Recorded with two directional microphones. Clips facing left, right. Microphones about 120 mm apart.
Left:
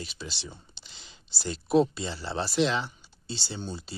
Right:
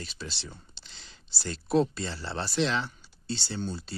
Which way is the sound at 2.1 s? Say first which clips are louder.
Left 3 dB; 5° left (ahead or behind).